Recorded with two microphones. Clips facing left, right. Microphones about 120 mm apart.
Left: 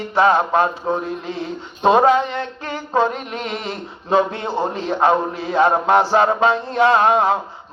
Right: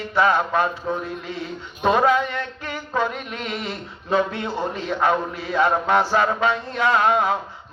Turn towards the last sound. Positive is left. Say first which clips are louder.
# left 4 dB
turn(degrees=30)  # may be behind; listen again after turning